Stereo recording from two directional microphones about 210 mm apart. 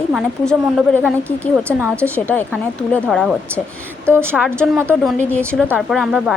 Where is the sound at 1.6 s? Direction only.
10° right (ahead or behind).